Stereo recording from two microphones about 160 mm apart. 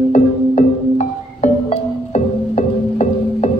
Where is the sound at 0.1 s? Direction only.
45° left (ahead or behind).